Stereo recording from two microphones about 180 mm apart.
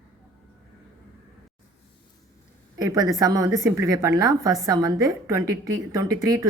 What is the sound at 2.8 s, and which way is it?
A woman's voice, 20° right (ahead or behind).